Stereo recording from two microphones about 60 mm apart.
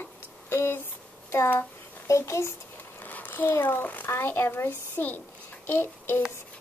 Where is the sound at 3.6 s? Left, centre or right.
Left.